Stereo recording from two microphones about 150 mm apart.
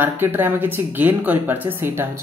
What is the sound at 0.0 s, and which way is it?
Speech, 15° right (ahead or behind).